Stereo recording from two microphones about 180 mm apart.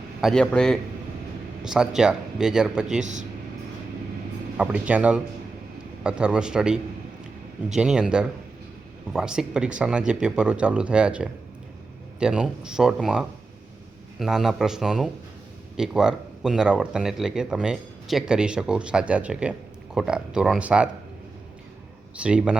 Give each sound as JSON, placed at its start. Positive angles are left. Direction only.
{"t": 0.2, "sound": "speech", "side_deg": 0}
{"t": 3.0, "sound": "speech", "side_deg": -40}
{"t": 4.5, "sound": "speech", "side_deg": -5}
{"t": 7.8, "sound": "speech", "side_deg": -5}
{"t": 22.2, "sound": "speech", "side_deg": -5}